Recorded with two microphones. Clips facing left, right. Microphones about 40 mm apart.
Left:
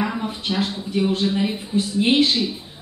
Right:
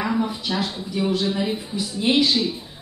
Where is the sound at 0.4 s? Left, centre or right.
Left.